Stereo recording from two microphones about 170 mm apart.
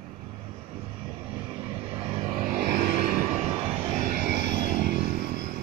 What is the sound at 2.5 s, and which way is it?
Music, 70° right (ahead or behind).